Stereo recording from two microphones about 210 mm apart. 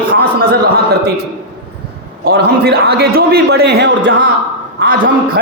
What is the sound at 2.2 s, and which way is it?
A man's voice, 45° right (ahead or behind).